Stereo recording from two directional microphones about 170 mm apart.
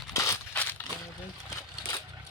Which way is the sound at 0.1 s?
15° left (ahead or behind).